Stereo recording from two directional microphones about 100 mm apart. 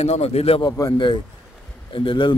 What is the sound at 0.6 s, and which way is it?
Speech, 35° left (ahead or behind).